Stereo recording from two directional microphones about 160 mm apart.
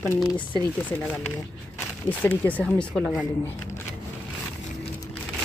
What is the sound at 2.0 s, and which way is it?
Speech, 10° left (ahead or behind).